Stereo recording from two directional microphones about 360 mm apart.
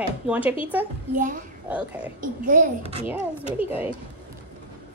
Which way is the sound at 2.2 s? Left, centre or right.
Right.